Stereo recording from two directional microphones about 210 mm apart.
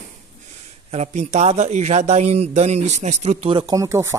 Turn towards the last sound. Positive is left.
turn(degrees=-15)  # may be behind; listen again after turning